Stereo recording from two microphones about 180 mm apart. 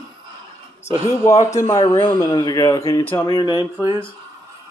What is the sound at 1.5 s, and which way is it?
Speech, 20° left (ahead or behind).